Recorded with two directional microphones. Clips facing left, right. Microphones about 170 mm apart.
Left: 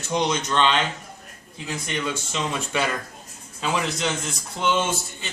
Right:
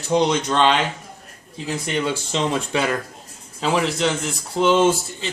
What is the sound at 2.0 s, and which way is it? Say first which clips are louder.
Speech: right 5 dB; 30° right (ahead or behind).